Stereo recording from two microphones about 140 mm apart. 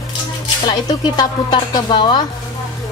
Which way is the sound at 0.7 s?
30° left (ahead or behind).